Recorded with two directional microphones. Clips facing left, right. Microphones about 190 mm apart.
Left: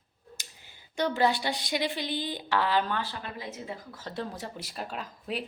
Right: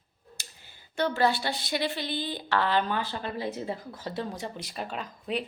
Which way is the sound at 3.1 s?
30° right (ahead or behind).